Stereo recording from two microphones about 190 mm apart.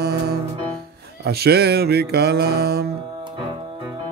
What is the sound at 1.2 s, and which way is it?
Mantra, 55° right (ahead or behind).